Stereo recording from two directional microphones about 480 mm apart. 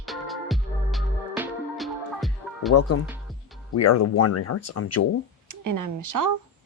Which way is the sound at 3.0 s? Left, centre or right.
Centre.